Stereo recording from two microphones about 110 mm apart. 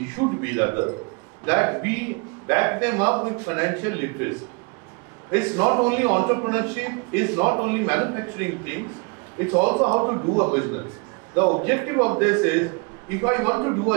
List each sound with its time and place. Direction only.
0.1 s a man's voice: 25° right (ahead or behind)